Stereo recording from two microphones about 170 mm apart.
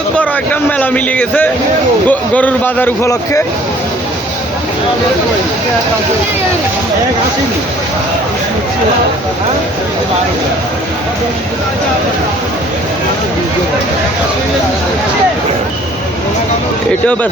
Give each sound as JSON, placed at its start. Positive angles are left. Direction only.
{"t": 0.8, "sound": "speech", "side_deg": 10}